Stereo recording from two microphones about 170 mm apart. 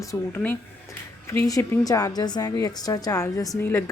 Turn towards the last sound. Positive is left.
turn(degrees=15)  # may be behind; listen again after turning